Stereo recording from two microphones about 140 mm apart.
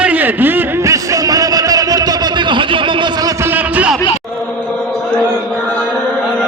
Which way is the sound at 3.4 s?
10° right (ahead or behind).